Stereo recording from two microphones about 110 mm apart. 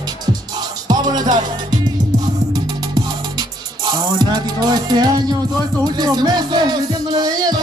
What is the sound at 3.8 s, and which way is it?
Music, 40° right (ahead or behind).